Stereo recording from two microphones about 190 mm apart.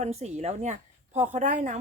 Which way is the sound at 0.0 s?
35° right (ahead or behind).